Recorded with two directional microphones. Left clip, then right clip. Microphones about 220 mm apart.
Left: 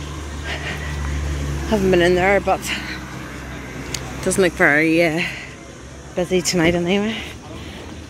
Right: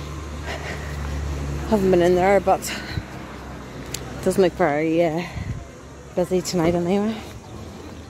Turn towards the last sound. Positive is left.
turn(degrees=-10)  # may be behind; listen again after turning